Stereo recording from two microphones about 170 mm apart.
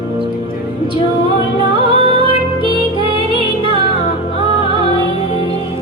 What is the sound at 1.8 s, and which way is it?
Music, 30° right (ahead or behind).